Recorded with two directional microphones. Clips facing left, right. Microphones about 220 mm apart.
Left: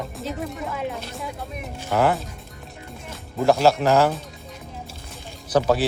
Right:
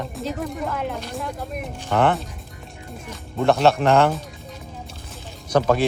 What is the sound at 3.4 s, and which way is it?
Speech, centre (ahead or behind).